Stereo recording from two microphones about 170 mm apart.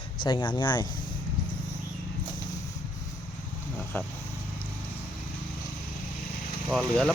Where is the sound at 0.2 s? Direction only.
30° left (ahead or behind).